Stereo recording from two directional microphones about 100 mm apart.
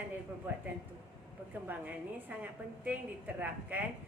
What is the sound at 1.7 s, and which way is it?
Speech, 15° right (ahead or behind).